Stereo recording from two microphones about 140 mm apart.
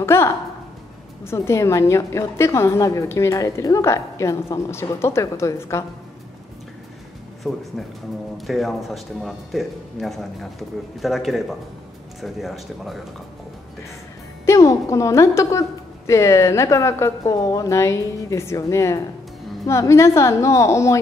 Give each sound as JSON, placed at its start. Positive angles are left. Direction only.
{"t": 0.0, "sound": "a sound", "side_deg": 20}
{"t": 1.2, "sound": "a woman's voice", "side_deg": 20}
{"t": 7.5, "sound": "speech", "side_deg": 0}
{"t": 14.4, "sound": "a woman's voice", "side_deg": 20}